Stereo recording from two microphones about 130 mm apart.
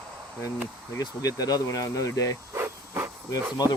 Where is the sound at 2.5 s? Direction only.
20° right (ahead or behind).